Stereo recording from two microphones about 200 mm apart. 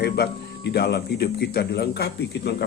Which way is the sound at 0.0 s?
55° left (ahead or behind).